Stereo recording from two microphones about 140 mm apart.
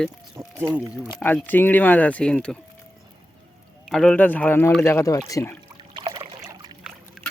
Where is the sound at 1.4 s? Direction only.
15° left (ahead or behind).